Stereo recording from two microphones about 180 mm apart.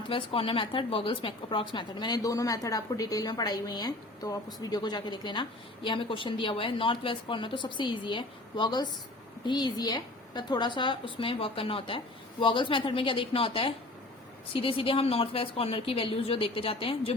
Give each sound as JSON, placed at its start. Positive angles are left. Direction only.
{"t": 0.1, "sound": "a woman's voice", "side_deg": 30}